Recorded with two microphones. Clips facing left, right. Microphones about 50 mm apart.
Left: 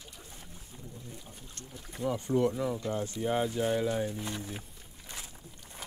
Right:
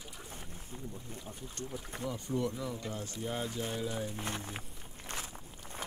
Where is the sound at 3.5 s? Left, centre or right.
Left.